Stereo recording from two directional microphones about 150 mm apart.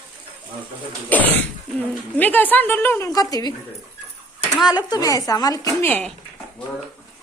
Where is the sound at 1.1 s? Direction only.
10° left (ahead or behind).